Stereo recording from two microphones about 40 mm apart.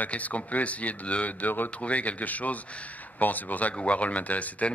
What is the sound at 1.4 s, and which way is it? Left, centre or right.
Speech, left.